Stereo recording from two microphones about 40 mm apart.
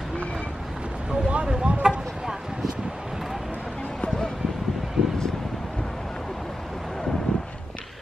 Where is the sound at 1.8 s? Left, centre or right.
Centre.